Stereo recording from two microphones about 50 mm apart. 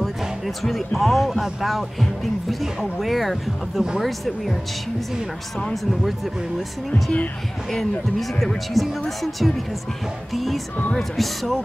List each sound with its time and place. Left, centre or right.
0.6 s speech: centre
6.9 s speech: left
8.8 s speech: centre